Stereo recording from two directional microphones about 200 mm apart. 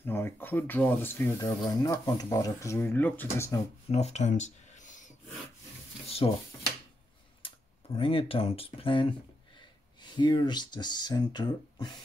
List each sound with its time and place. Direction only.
0.0 s speech: 10° left (ahead or behind)
3.9 s speech: 35° left (ahead or behind)
6.0 s dishes: 30° left (ahead or behind)
7.4 s speech: 25° left (ahead or behind)
10.1 s speech: 20° left (ahead or behind)